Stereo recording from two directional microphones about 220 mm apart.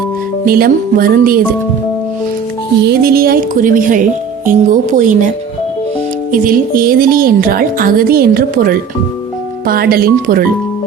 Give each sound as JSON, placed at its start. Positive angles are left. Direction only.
{"t": 0.4, "sound": "speech", "side_deg": -40}
{"t": 2.8, "sound": "speech", "side_deg": -45}
{"t": 6.3, "sound": "speech", "side_deg": -40}